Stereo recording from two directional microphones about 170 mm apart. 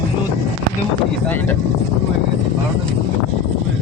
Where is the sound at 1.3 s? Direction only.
10° left (ahead or behind).